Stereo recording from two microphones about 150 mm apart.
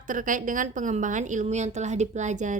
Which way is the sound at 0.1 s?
60° right (ahead or behind).